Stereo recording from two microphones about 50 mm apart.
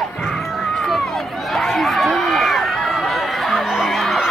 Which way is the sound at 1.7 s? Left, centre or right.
Centre.